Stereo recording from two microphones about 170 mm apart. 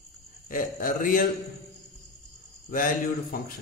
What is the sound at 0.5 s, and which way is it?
Speech, 55° left (ahead or behind).